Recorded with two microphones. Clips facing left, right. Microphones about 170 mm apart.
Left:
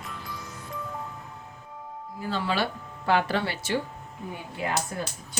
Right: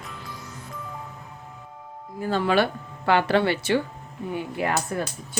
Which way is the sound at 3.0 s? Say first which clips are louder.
Right 5 dB; 70° right (ahead or behind).